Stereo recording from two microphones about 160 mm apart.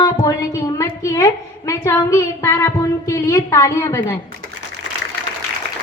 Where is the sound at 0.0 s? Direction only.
20° left (ahead or behind).